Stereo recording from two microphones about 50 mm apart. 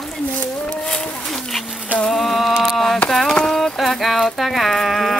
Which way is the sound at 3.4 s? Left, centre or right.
Centre.